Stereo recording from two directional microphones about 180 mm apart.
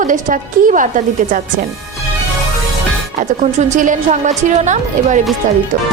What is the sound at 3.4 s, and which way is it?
A woman's voice, 45° right (ahead or behind).